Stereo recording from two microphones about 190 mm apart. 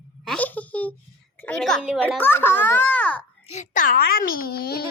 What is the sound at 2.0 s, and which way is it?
A child's voice, 10° left (ahead or behind).